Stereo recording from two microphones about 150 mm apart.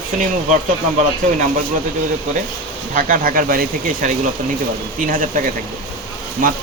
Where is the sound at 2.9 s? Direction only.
65° right (ahead or behind).